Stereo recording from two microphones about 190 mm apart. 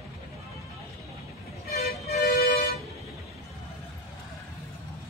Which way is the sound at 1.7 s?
55° left (ahead or behind).